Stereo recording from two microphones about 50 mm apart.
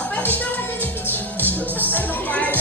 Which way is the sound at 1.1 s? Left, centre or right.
Left.